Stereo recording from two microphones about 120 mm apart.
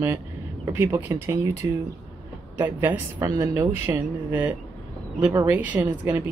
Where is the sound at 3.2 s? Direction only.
30° right (ahead or behind); by 6.2 s 15° right (ahead or behind).